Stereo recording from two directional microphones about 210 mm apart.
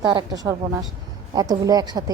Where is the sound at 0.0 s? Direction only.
20° right (ahead or behind).